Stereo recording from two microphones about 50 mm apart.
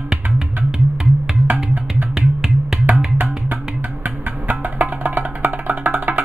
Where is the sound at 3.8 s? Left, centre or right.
Right.